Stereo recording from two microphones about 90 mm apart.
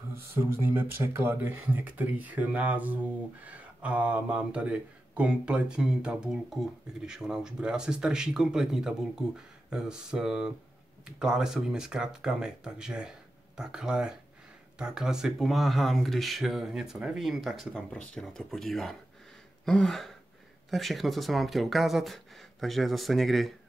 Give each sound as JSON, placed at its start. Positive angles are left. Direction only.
{"t": 0.1, "sound": "speech", "side_deg": -25}
{"t": 17.7, "sound": "speech", "side_deg": 10}
{"t": 19.6, "sound": "a sound", "side_deg": 5}
{"t": 20.7, "sound": "speech", "side_deg": 0}